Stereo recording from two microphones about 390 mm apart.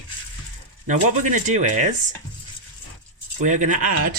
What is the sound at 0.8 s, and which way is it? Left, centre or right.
Speech, centre.